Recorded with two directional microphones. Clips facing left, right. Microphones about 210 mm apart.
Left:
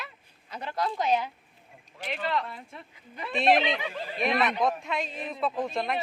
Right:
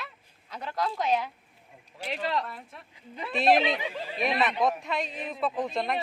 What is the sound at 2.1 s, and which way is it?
Speech, 35° right (ahead or behind).